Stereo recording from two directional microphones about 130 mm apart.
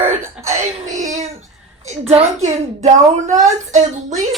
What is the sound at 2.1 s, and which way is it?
A woman's voice, 55° right (ahead or behind).